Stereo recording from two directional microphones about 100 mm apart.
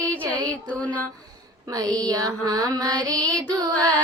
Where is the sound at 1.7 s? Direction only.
35° right (ahead or behind).